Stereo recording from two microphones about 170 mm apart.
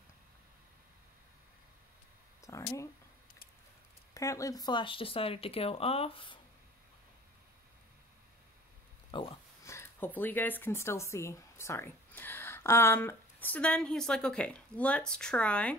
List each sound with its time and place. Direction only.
2.4 s speech: 20° left (ahead or behind)
4.1 s speech: 20° left (ahead or behind)
9.1 s speech: 30° left (ahead or behind)
9.7 s speech: 15° left (ahead or behind)